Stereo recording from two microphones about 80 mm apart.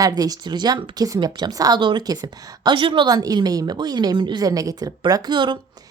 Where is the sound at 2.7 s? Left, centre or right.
Right.